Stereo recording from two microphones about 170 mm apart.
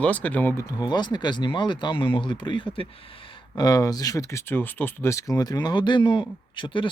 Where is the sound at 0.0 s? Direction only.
10° left (ahead or behind).